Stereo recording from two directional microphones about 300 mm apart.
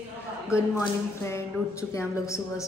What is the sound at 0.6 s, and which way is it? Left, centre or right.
A woman's voice, centre.